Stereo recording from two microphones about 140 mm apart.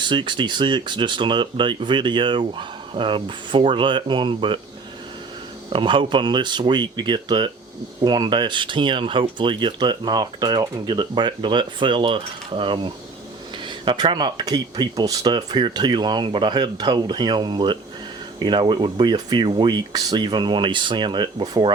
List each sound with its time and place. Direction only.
0.0 s speech: 35° right (ahead or behind)
5.7 s speech: 35° right (ahead or behind)